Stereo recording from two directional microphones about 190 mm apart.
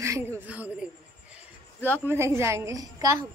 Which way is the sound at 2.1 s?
15° right (ahead or behind).